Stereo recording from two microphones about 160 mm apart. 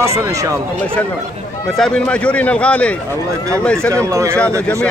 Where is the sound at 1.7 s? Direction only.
5° left (ahead or behind).